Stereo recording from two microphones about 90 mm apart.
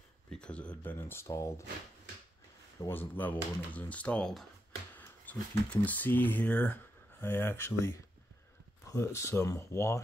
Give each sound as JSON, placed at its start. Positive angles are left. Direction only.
{"t": 0.3, "sound": "speech", "side_deg": 10}
{"t": 0.9, "sound": "speech", "side_deg": 25}
{"t": 2.9, "sound": "speech", "side_deg": 20}